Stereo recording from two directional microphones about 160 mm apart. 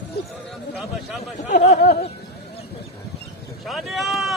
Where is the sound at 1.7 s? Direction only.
80° left.